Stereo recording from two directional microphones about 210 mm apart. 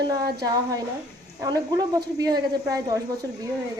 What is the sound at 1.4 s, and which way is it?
Speech, 15° right (ahead or behind).